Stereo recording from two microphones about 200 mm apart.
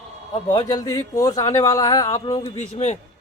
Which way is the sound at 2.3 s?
30° left (ahead or behind).